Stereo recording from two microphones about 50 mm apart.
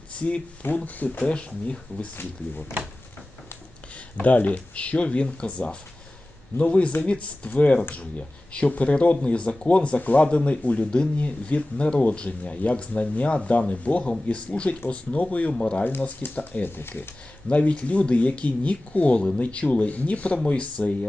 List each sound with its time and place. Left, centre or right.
0.1 s speech: left
1.2 s speech: left
4.2 s speech: left
15.8 s speech: left
17.5 s speech: left